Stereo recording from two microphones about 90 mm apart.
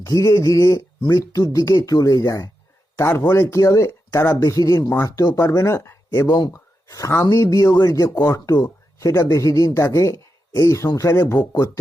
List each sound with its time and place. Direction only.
0.0 s speech: 35° left (ahead or behind)
2.9 s speech: 30° left (ahead or behind)
6.2 s speech: 50° left (ahead or behind)
6.5 s speech: 35° left (ahead or behind)